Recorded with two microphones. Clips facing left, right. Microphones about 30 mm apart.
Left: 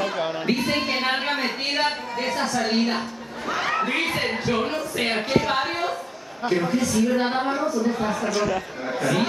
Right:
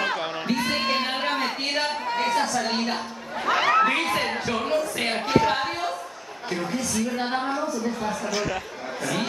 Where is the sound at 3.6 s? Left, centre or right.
Centre.